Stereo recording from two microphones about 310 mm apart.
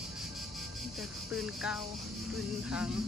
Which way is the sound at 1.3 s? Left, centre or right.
Centre.